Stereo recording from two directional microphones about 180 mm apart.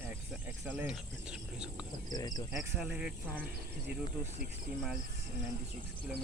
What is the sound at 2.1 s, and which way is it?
Speech, 20° left (ahead or behind).